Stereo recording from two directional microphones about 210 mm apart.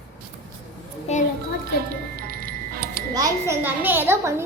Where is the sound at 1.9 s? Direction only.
45° right (ahead or behind).